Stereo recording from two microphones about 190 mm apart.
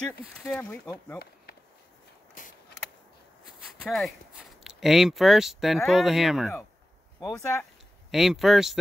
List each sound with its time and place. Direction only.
0.3 s speech: 5° left (ahead or behind)
2.4 s mechanisms: 45° left (ahead or behind)
3.8 s speech: centre (ahead or behind)
7.3 s speech: 15° left (ahead or behind)
8.1 s speech: centre (ahead or behind)